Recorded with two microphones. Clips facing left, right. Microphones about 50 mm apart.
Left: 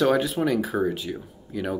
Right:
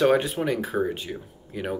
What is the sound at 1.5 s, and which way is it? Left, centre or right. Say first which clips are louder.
Speech: left 2 dB; centre.